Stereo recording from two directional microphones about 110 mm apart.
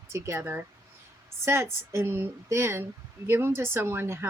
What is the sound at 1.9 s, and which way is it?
A woman's voice, 20° right (ahead or behind).